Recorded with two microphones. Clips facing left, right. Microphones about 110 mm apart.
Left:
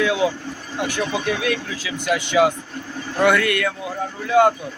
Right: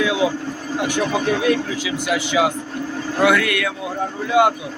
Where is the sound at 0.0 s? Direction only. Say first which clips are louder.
Even; 20° right (ahead or behind).